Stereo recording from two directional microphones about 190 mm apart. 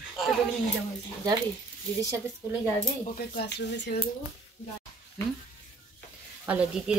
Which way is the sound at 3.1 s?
55° left (ahead or behind).